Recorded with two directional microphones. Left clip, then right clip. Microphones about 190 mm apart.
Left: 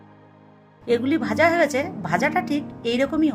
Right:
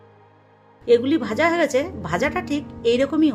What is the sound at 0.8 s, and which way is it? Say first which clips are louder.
A woman's voice: right 4 dB; 10° right (ahead or behind).